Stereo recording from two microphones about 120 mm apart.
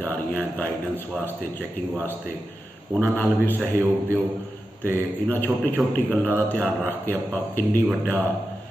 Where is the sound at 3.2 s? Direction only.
15° left (ahead or behind).